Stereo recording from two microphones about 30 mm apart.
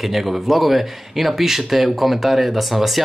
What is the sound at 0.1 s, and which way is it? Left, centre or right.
Speech, centre.